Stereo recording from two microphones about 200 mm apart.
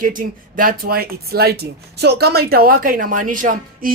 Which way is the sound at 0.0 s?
45° right (ahead or behind).